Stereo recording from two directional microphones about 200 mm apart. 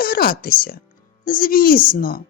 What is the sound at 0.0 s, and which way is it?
A child's voice, 45° left (ahead or behind).